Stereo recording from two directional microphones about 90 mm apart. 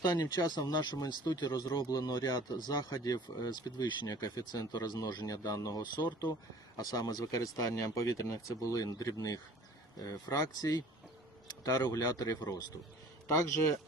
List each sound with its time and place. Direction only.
0.0 s speech: 50° left (ahead or behind)